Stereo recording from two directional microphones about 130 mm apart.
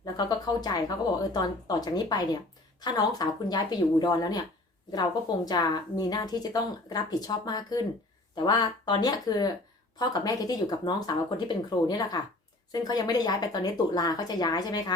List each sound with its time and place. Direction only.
0.0 s speech: 30° left (ahead or behind)
5.5 s speech: 30° left (ahead or behind)